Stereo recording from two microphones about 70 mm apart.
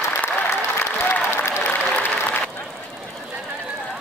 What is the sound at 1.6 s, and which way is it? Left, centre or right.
Applause, left.